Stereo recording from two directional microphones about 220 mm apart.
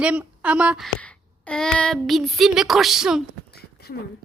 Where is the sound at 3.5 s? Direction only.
45° left (ahead or behind).